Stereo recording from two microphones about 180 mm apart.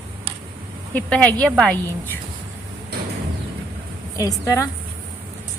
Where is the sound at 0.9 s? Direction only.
10° left (ahead or behind).